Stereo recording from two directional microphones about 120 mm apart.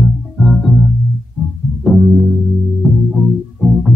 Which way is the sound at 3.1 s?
Centre (ahead or behind).